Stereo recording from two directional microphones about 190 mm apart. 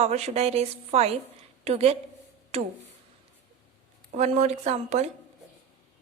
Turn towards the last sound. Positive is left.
turn(degrees=-35)  # may be behind; listen again after turning